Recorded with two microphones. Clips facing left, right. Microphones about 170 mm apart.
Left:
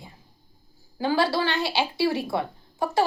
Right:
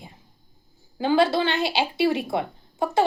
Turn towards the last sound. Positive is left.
turn(degrees=-20)  # may be behind; listen again after turning